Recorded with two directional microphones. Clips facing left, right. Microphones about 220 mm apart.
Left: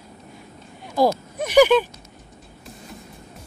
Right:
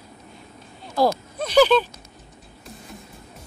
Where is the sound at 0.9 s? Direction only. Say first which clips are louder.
Left 1 dB; 15° left (ahead or behind).